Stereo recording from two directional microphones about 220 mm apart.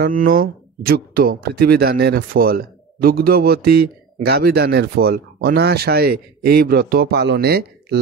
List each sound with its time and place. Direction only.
0.0 s speech: 40° right (ahead or behind)